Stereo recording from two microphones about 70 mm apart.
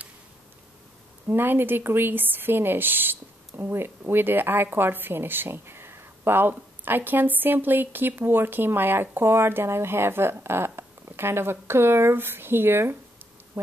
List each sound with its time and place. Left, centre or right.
1.3 s speech: right